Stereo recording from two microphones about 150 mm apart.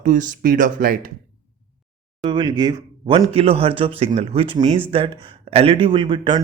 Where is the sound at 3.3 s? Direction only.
40° right (ahead or behind).